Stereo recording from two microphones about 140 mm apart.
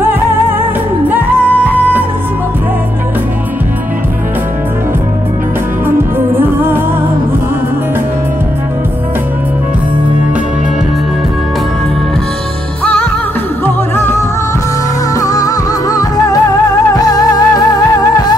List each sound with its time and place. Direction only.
1.0 s music: 10° right (ahead or behind)
5.9 s music: 15° right (ahead or behind)
13.9 s music: 15° left (ahead or behind)